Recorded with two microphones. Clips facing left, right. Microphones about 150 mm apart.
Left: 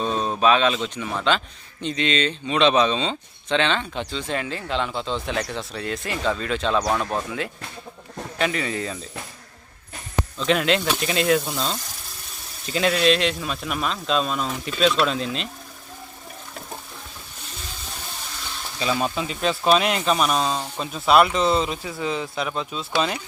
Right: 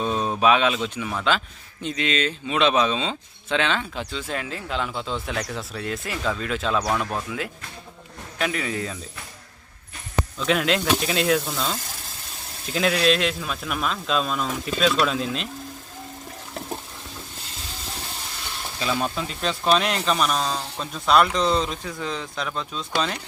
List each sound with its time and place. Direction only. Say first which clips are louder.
0.0 s speech: even; 10° right (ahead or behind)
10.3 s speech: left 2 dB; centre (ahead or behind)
18.8 s speech: left 2 dB; 5° left (ahead or behind)